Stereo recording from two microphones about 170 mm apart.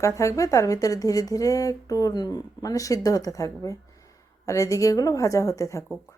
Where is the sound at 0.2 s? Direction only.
20° left (ahead or behind).